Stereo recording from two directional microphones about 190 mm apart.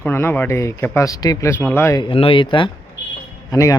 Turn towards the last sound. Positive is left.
turn(degrees=20)  # may be behind; listen again after turning